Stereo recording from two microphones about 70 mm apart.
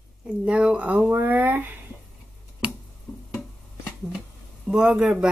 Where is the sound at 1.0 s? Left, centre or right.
Right.